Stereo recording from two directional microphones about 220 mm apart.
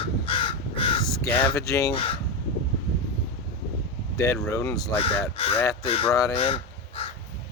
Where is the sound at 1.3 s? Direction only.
10° left (ahead or behind).